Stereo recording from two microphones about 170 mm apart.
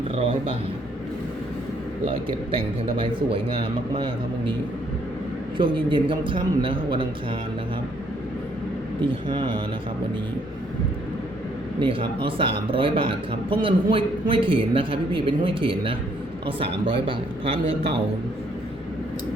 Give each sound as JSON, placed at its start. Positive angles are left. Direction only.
{"t": 0.2, "sound": "speech", "side_deg": -30}
{"t": 2.0, "sound": "speech", "side_deg": -30}
{"t": 5.5, "sound": "a man's voice", "side_deg": -30}
{"t": 9.0, "sound": "a man's voice", "side_deg": -30}
{"t": 11.8, "sound": "speech", "side_deg": -30}